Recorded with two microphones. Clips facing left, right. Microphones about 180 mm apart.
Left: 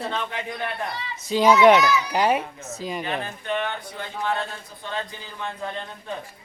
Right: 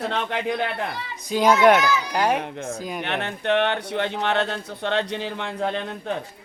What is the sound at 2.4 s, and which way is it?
Speech, 55° right (ahead or behind).